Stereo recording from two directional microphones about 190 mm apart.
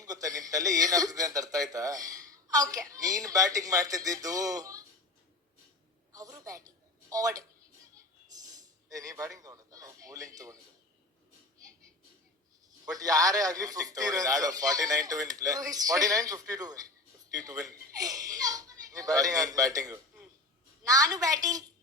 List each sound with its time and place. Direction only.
0.0 s a man's voice: 20° right (ahead or behind)
6.1 s a sound: 20° right (ahead or behind)
7.1 s a man's voice: 20° right (ahead or behind)
8.3 s a sound: 20° right (ahead or behind)
8.9 s a man's voice: 20° right (ahead or behind)
12.8 s a man's voice: 20° right (ahead or behind)